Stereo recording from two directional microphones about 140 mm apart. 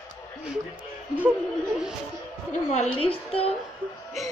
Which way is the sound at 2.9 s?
40° left (ahead or behind).